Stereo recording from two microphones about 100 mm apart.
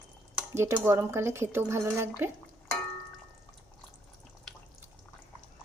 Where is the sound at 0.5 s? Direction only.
25° right (ahead or behind).